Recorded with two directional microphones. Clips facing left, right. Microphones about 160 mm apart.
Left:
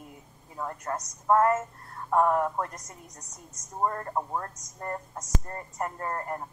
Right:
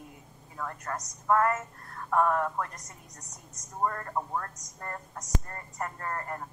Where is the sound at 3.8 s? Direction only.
25° left (ahead or behind).